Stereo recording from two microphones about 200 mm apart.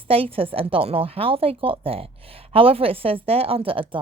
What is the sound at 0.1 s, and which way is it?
Speech, 25° right (ahead or behind).